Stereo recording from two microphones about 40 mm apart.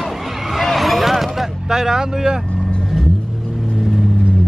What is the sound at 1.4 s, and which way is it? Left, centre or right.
Vehicle, centre.